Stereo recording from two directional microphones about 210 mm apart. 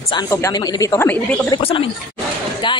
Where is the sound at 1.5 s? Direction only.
25° left (ahead or behind).